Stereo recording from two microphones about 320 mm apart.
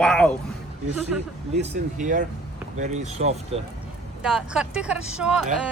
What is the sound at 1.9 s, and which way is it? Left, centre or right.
Speech, right.